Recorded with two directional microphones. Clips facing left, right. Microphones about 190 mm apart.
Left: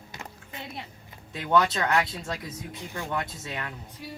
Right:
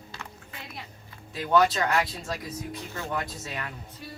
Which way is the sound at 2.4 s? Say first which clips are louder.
Right 2 dB; 20° left (ahead or behind).